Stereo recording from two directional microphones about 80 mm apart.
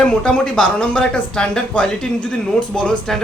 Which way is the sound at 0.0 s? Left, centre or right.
Centre.